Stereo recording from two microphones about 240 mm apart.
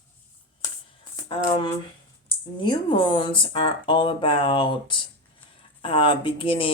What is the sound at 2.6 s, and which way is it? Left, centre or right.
Speech, centre.